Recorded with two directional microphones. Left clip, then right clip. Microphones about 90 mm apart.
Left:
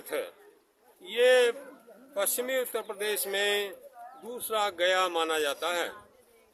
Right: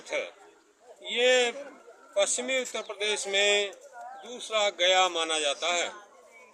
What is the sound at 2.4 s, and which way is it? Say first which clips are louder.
Speech: even; 90° left.